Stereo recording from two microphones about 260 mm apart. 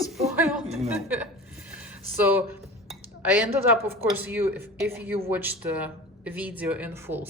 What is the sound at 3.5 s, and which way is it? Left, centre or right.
A woman's voice, centre.